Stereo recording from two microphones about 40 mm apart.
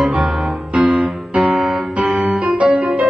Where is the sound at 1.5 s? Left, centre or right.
Centre.